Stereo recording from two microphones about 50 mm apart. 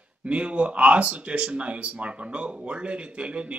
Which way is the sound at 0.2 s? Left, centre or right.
Right.